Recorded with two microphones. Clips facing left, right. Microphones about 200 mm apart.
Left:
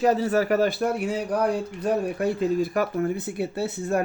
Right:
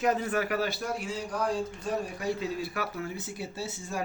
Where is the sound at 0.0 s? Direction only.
35° left (ahead or behind).